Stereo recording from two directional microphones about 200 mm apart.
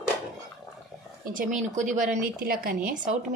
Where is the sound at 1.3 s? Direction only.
40° right (ahead or behind).